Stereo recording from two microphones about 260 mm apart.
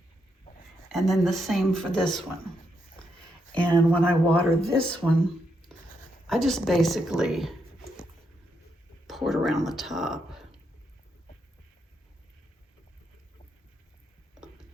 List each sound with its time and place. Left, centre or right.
0.9 s speech: centre
3.5 s speech: centre
6.2 s speech: centre
9.0 s a sound: centre
9.6 s speech: centre